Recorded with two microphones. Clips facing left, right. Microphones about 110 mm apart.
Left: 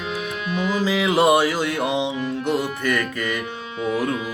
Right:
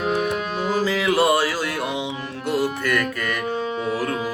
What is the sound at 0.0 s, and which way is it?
Music, 45° right (ahead or behind).